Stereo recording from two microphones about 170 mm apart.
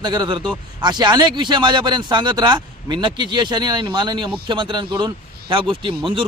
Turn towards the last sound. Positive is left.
turn(degrees=-30)  # may be behind; listen again after turning